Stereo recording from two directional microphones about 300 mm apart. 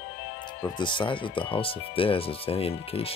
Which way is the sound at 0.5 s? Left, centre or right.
Centre.